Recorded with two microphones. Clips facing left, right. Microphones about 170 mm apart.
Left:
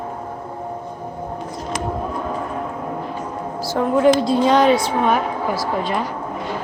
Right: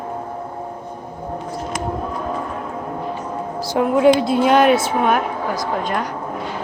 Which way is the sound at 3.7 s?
10° right (ahead or behind).